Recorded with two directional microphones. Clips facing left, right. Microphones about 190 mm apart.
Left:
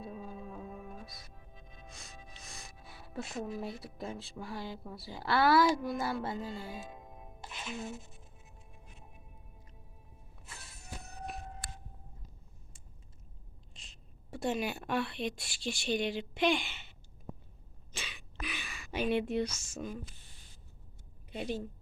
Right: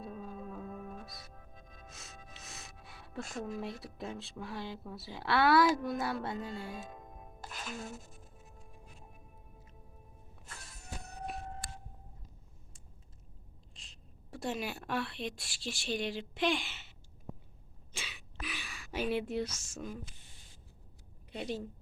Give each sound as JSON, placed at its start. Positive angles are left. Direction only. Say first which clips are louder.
{"t": 0.0, "sound": "music", "louder": "even", "side_deg": 0}
{"t": 1.5, "sound": "music", "louder": "even", "side_deg": -45}
{"t": 1.9, "sound": "music", "louder": "left 1 dB", "side_deg": 0}
{"t": 10.4, "sound": "music", "louder": "even", "side_deg": 5}
{"t": 13.7, "sound": "a woman's voice", "louder": "left 1 dB", "side_deg": 0}
{"t": 17.9, "sound": "a sound", "louder": "left 1 dB", "side_deg": -5}
{"t": 21.3, "sound": "a woman's voice", "louder": "left 1 dB", "side_deg": 0}